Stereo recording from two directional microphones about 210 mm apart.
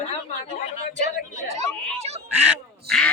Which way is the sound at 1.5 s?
30° right (ahead or behind).